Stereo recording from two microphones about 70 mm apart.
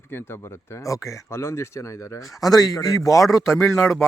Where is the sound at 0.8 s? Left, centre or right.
Left.